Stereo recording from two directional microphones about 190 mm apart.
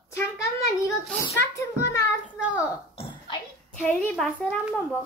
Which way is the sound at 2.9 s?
30° left (ahead or behind).